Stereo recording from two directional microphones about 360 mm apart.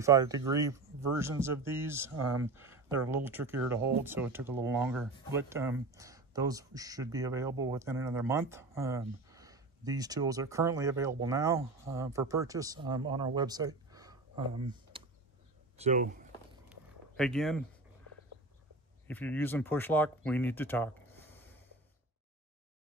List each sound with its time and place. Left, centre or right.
0.0 s speech: centre
2.1 s speech: right
2.4 s speech: centre
17.2 s speech: centre
19.0 s speech: centre